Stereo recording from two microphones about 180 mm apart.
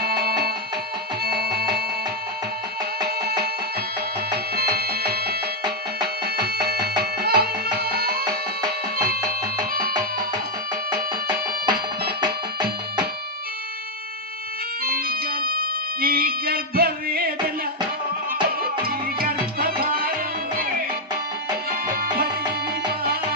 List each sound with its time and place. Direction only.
0.0 s music: 60° right (ahead or behind)
4.5 s music: 60° right (ahead or behind)
7.0 s music: 60° right (ahead or behind)
10.9 s music: 25° right (ahead or behind)
14.8 s music: 55° right (ahead or behind)
18.9 s music: 55° right (ahead or behind)
21.7 s music: 55° right (ahead or behind)